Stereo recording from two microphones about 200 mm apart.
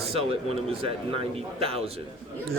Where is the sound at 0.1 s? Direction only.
30° right (ahead or behind).